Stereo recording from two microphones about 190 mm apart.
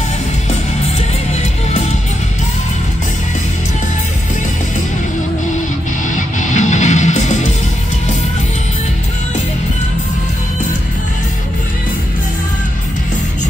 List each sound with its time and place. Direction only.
1.3 s music: 35° left (ahead or behind)
6.0 s music: 40° left (ahead or behind)